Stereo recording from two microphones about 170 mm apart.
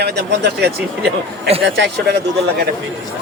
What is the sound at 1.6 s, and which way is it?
Speech, 90° right.